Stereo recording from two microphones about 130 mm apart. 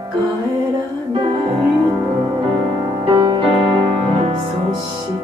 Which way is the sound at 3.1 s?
40° right (ahead or behind).